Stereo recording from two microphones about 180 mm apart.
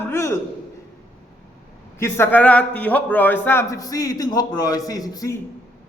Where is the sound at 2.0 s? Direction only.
10° left (ahead or behind).